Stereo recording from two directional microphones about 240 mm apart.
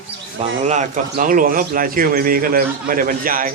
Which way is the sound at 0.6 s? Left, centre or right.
Right.